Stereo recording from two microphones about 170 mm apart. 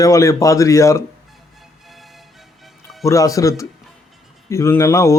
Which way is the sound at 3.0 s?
20° left (ahead or behind).